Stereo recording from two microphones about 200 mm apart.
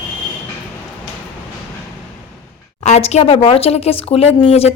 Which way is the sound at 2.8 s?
35° left (ahead or behind).